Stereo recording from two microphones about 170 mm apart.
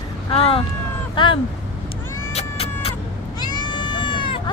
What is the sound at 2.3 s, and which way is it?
Vehicle, 35° left (ahead or behind).